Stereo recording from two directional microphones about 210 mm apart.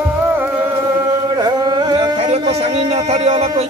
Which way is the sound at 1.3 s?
20° right (ahead or behind).